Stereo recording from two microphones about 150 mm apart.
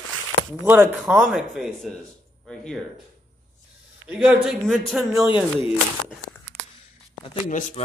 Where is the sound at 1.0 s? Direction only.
Centre (ahead or behind).